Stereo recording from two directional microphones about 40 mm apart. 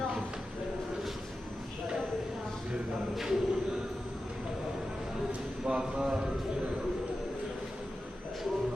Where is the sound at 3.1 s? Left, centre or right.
Centre.